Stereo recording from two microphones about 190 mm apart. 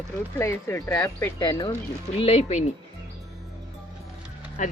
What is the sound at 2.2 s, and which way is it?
Speech, 30° left (ahead or behind).